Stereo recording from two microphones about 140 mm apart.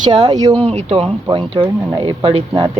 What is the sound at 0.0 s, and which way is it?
Speech, 30° right (ahead or behind).